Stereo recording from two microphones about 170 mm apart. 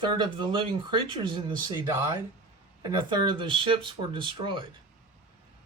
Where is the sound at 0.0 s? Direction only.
25° right (ahead or behind).